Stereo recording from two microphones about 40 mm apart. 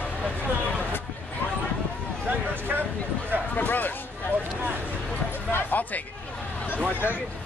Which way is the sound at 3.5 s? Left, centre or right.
Left.